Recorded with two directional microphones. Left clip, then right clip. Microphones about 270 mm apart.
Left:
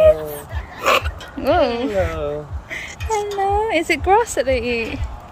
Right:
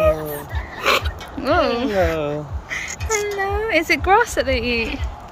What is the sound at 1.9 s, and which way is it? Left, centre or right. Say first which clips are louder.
Speech: right 2 dB; right.